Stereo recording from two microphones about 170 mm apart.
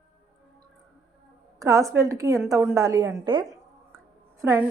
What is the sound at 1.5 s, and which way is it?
A woman's voice, 20° right (ahead or behind).